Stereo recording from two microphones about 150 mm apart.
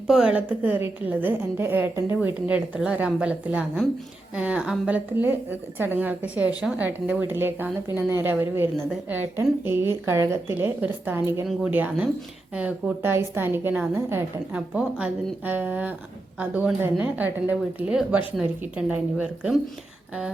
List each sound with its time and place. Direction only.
0.1 s a woman's voice: 5° right (ahead or behind)